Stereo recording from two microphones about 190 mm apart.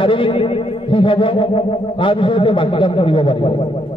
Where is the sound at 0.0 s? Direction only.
25° left (ahead or behind).